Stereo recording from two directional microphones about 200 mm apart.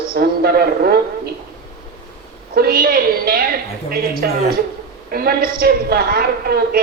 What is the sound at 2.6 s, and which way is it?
A woman's voice, 50° right (ahead or behind).